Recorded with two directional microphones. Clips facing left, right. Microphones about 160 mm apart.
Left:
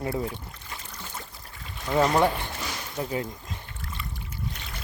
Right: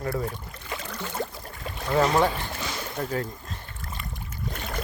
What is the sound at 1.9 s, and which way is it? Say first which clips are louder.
Speech: even; 10° left (ahead or behind).